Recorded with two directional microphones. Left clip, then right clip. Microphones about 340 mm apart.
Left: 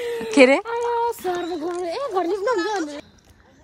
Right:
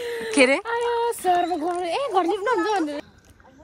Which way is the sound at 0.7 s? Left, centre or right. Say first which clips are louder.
Left 1 dB; centre.